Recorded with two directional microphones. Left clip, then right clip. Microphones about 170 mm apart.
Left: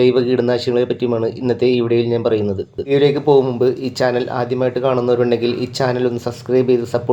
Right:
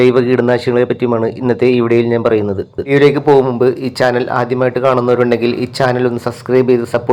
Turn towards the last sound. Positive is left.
turn(degrees=-15)  # may be behind; listen again after turning